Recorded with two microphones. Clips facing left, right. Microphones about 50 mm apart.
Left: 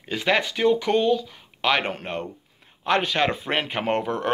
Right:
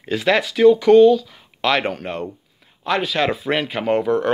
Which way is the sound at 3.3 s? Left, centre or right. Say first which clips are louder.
Right 4 dB; left.